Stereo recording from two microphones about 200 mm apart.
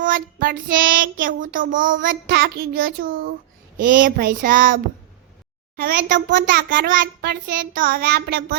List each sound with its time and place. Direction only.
0.0 s child singing: 45° right (ahead or behind)
6.3 s a child's voice: 50° right (ahead or behind)
7.2 s child singing: 45° right (ahead or behind)